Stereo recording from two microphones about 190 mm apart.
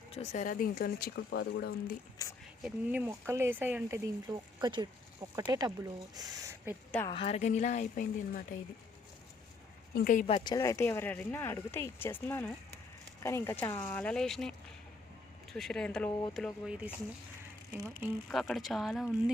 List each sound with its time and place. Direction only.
0.1 s speech: 35° left (ahead or behind); by 1.7 s 60° left (ahead or behind)
2.2 s speech: 20° left (ahead or behind)
2.6 s speech: 10° right (ahead or behind)
7.1 s speech: 30° left (ahead or behind)
9.9 s speech: 50° left (ahead or behind)
10.2 s speech: 25° left (ahead or behind); by 14.5 s centre (ahead or behind)
15.5 s speech: 5° left (ahead or behind)
18.3 s speech: centre (ahead or behind)